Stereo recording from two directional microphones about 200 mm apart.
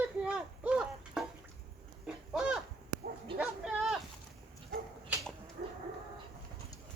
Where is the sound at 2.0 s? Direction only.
5° right (ahead or behind).